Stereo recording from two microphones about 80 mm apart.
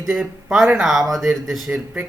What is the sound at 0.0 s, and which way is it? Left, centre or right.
Speech, centre.